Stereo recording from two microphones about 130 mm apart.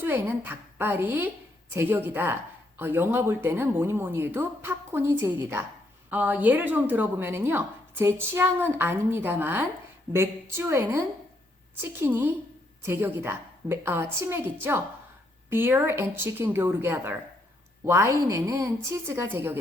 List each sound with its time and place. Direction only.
0.0 s a woman's voice: 15° right (ahead or behind)